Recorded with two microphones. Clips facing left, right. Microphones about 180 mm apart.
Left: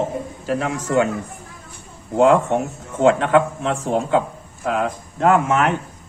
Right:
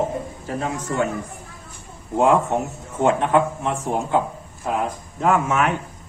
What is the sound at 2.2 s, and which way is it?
A man's voice, 85° left.